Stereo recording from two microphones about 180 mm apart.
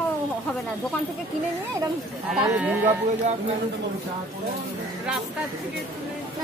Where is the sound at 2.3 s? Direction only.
5° right (ahead or behind).